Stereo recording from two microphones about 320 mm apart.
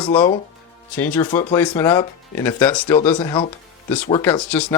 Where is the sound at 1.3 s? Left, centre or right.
Centre.